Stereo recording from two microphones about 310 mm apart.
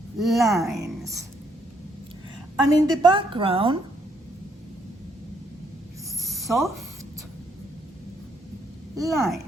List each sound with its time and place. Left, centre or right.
0.2 s speech: centre
2.6 s a woman's voice: centre
6.2 s a sound: centre
9.0 s speech: centre